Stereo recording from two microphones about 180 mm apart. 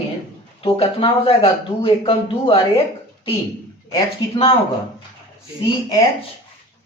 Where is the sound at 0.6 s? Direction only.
30° left (ahead or behind).